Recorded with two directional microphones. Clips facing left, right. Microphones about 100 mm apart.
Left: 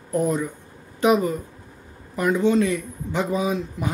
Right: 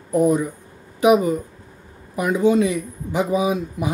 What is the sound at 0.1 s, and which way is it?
Speech, 10° right (ahead or behind).